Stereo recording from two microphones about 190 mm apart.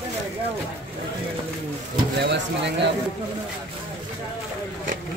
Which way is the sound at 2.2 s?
65° right (ahead or behind).